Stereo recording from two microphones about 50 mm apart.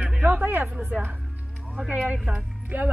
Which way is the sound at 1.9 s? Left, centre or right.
Right.